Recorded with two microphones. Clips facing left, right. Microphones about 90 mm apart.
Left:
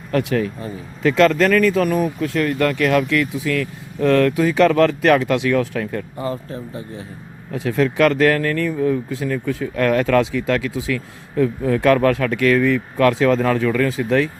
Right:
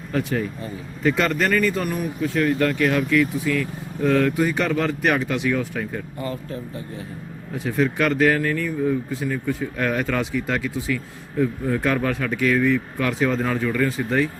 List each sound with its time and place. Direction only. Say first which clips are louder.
0.1 s speech: left 5 dB; 90° left
6.1 s speech: left 3 dB; 30° left (ahead or behind)
7.5 s speech: left 3 dB; 90° left